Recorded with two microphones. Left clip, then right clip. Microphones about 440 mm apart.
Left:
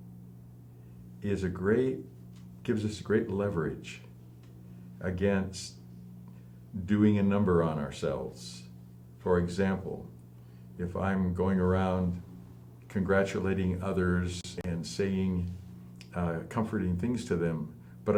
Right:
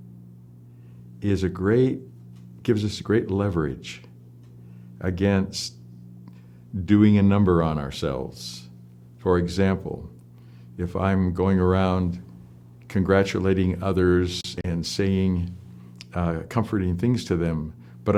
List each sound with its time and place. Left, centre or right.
1.2 s speech: right
4.9 s speech: right
6.8 s speech: right
10.8 s speech: right